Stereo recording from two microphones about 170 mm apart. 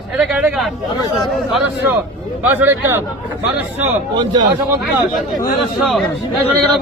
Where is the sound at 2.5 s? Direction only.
15° right (ahead or behind).